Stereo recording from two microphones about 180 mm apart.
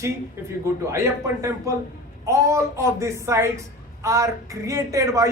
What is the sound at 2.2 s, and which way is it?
A woman's voice, 15° right (ahead or behind).